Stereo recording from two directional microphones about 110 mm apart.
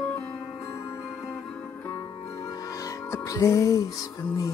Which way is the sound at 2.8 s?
30° left (ahead or behind).